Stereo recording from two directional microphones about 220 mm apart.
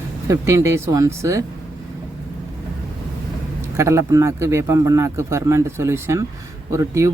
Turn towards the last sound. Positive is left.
turn(degrees=-15)  # may be behind; listen again after turning